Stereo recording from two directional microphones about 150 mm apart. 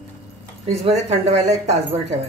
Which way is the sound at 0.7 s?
45° right (ahead or behind).